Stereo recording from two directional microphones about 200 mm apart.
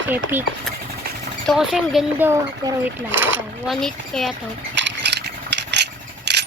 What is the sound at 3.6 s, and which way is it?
Speech, centre (ahead or behind).